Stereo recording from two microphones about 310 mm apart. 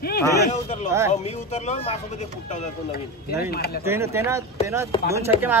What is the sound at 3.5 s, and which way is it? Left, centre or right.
Speech, left.